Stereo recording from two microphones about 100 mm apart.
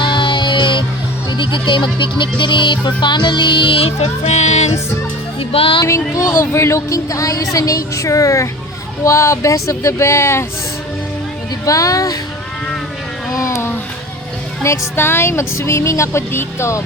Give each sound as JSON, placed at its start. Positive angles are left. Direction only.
{"t": 0.0, "sound": "music", "side_deg": 55}
{"t": 5.4, "sound": "speech", "side_deg": 70}
{"t": 5.8, "sound": "speech", "side_deg": 35}
{"t": 11.6, "sound": "speech", "side_deg": 35}
{"t": 13.3, "sound": "a sound", "side_deg": 30}
{"t": 14.6, "sound": "speech", "side_deg": 25}